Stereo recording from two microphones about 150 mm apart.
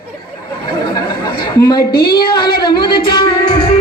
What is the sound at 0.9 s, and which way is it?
Chatter, 30° left (ahead or behind).